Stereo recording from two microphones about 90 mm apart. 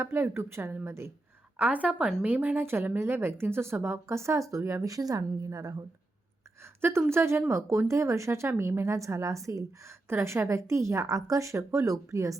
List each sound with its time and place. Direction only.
0.0 s speech: 25° right (ahead or behind)
1.5 s a woman's voice: 15° right (ahead or behind); by 5.8 s 40° right (ahead or behind)
6.6 s speech: 30° right (ahead or behind)